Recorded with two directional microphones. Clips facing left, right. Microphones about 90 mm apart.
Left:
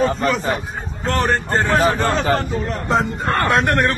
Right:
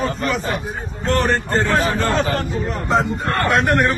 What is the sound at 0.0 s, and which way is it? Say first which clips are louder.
Speech: left 3 dB; 30° left (ahead or behind).